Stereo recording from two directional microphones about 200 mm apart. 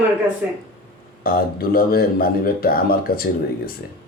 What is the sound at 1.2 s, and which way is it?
A man's voice, 45° left (ahead or behind).